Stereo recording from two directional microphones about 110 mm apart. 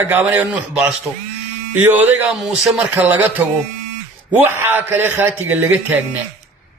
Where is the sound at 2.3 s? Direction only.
5° right (ahead or behind).